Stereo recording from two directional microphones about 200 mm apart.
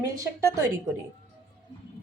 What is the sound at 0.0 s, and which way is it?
Speech, 15° right (ahead or behind).